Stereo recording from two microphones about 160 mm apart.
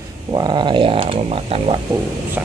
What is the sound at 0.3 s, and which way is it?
Speech, 30° right (ahead or behind).